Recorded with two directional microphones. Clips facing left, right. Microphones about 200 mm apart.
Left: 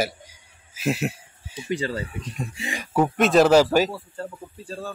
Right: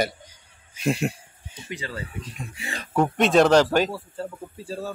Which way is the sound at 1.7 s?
35° left (ahead or behind).